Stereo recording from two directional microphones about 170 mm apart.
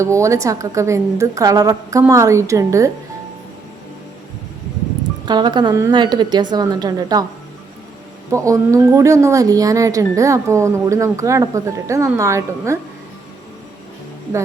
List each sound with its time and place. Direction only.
0.0 s a woman's voice: 15° right (ahead or behind)
5.2 s a woman's voice: 25° right (ahead or behind)
8.3 s a woman's voice: 20° right (ahead or behind)